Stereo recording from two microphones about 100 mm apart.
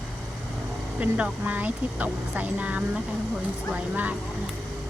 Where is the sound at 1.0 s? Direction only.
15° right (ahead or behind).